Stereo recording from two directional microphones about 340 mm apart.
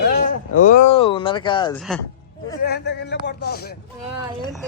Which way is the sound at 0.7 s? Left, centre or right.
Centre.